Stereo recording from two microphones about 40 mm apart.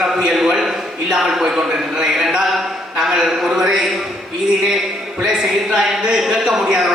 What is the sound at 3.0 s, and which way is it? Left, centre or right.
Speech, centre.